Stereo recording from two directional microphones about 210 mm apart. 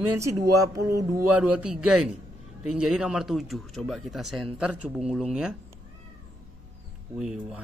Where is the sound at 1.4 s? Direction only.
5° right (ahead or behind).